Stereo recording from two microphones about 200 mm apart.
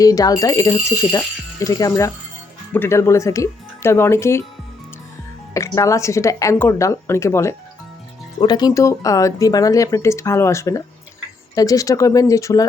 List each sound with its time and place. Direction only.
0.0 s speech: 20° left (ahead or behind)
5.5 s speech: 15° left (ahead or behind)